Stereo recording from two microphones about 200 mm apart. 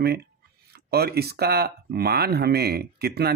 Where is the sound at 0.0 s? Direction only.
55° right (ahead or behind).